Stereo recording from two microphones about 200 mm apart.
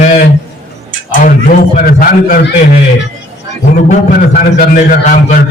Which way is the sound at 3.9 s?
40° left (ahead or behind).